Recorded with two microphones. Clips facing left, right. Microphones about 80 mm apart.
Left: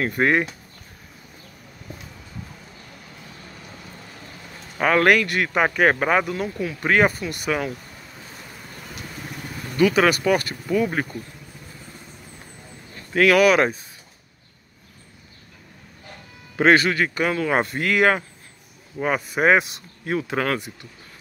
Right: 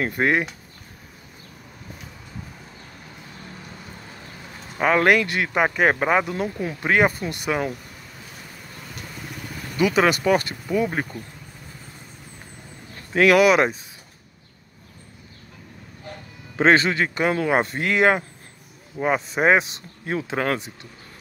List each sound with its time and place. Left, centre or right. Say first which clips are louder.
0.0 s speech: left 1 dB; centre
4.7 s a man's voice: even; centre
9.8 s a man's voice: left 1 dB; right
11.0 s speech: left 1 dB; centre
13.1 s a man's voice: even; right
16.5 s a man's voice: left 1 dB; right